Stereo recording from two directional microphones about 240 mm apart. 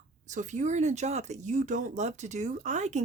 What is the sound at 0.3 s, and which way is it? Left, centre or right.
Speech, right.